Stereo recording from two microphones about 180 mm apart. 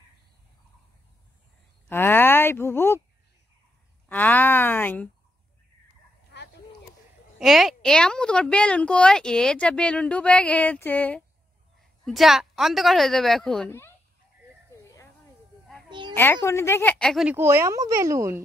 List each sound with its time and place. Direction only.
1.9 s speech: 10° left (ahead or behind)
4.1 s speech: 10° left (ahead or behind)
7.3 s a woman's voice: centre (ahead or behind)
16.2 s speech: 15° left (ahead or behind)
17.4 s speech: 15° right (ahead or behind)